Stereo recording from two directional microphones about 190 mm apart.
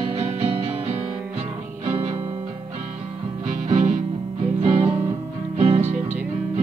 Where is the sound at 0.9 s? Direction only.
10° right (ahead or behind).